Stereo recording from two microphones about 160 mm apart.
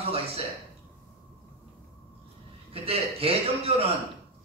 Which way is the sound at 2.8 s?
35° right (ahead or behind).